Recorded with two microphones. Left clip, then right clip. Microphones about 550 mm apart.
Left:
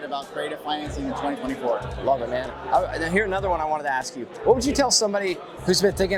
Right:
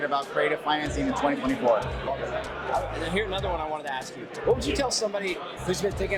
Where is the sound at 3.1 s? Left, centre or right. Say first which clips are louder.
Left 5 dB; left.